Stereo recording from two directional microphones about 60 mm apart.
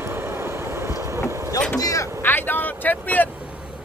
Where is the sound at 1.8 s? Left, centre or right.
Left.